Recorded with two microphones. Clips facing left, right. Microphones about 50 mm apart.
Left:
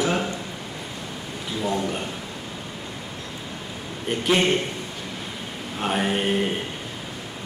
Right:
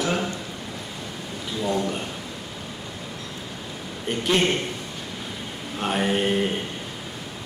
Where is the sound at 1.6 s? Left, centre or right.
Centre.